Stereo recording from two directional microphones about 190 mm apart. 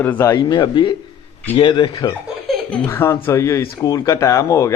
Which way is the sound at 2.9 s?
15° left (ahead or behind).